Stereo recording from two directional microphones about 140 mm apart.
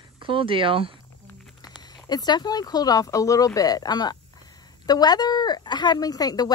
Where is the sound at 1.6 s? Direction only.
30° left (ahead or behind).